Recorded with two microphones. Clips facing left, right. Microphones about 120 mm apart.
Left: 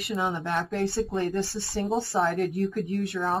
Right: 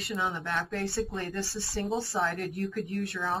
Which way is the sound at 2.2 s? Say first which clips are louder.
Left 6 dB; 25° left (ahead or behind).